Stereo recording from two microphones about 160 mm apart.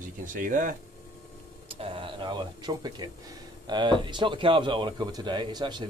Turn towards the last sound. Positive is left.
turn(degrees=-30)  # may be behind; listen again after turning